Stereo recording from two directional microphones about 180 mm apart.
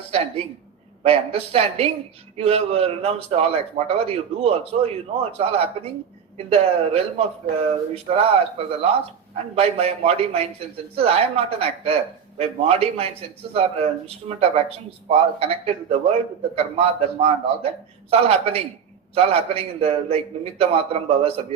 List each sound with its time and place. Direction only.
1.0 s a man's voice: 35° right (ahead or behind)